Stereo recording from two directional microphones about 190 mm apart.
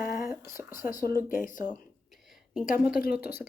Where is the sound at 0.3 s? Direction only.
15° right (ahead or behind).